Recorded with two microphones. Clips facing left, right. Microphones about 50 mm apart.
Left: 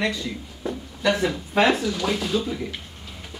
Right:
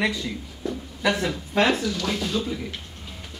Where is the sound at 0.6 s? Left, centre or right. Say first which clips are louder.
Even; centre.